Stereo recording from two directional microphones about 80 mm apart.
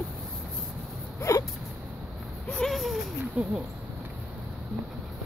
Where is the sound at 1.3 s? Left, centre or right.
Left.